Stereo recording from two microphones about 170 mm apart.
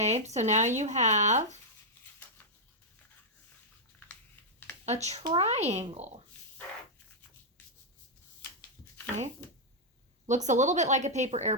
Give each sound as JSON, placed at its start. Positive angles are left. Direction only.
{"t": 0.0, "sound": "speech", "side_deg": -40}
{"t": 4.9, "sound": "speech", "side_deg": -40}
{"t": 10.2, "sound": "speech", "side_deg": -45}